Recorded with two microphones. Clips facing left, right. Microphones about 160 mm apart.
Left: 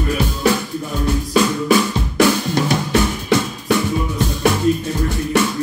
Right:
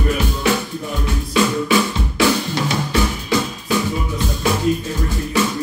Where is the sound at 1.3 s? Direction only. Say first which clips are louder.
Left 1 dB; 40° left (ahead or behind).